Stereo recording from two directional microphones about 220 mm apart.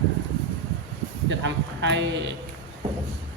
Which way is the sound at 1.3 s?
55° right (ahead or behind).